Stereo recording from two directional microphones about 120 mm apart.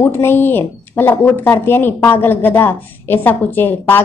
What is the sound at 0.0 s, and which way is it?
A woman's voice, 20° left (ahead or behind).